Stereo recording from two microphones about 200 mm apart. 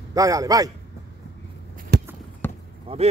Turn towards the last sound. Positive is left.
turn(degrees=-30)  # may be behind; listen again after turning